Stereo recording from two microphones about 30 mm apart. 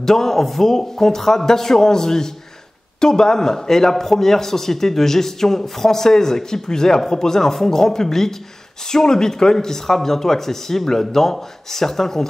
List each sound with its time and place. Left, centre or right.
0.0 s speech: centre